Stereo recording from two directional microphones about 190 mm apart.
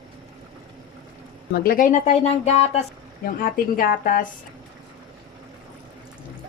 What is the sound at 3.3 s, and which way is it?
Speech, 50° left (ahead or behind).